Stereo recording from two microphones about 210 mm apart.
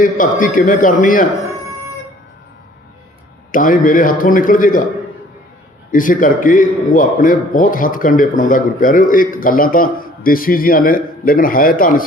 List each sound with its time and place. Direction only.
0.0 s a man's voice: 40° left (ahead or behind)
3.5 s a man's voice: 40° left (ahead or behind)
5.9 s a man's voice: 40° left (ahead or behind)